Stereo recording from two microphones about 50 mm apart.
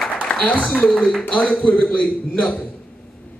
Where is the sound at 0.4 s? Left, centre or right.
Left.